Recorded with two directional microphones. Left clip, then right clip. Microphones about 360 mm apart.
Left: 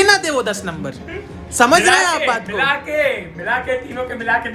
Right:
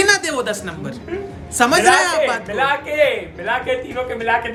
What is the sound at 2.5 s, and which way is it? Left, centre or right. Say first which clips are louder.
Speech: even; right.